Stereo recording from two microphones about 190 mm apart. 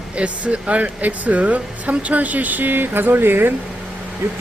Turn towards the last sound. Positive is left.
turn(degrees=-10)  # may be behind; listen again after turning